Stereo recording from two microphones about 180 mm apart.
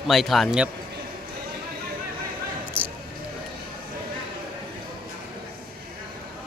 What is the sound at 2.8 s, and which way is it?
Basketball bounce, 10° right (ahead or behind).